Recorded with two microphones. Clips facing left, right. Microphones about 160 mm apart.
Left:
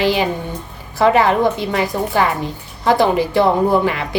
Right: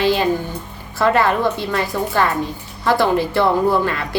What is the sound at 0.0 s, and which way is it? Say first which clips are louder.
A woman's voice: even; 15° left (ahead or behind).